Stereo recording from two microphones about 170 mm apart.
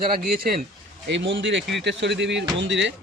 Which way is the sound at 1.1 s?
90° right.